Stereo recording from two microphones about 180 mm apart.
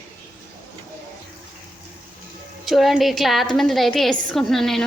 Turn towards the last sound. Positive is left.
turn(degrees=0)  # may be behind; listen again after turning